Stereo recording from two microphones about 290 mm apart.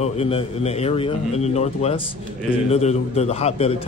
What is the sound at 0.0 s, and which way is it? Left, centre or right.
A man's voice, centre.